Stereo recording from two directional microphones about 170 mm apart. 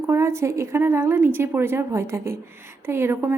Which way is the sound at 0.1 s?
15° right (ahead or behind).